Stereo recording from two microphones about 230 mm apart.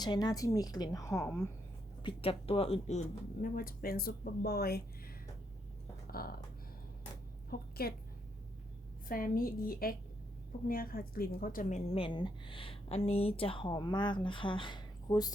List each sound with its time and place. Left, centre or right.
0.0 s a woman's voice: centre
2.0 s speech: left
6.1 s speech: left
7.5 s a woman's voice: left
9.0 s a woman's voice: left; by 15.3 s centre